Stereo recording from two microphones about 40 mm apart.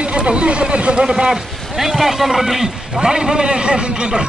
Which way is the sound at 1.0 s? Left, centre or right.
Centre.